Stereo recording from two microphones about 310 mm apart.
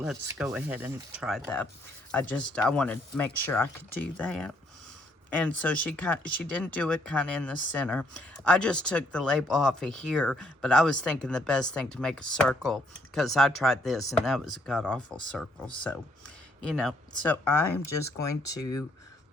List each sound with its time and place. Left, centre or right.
0.0 s speech: centre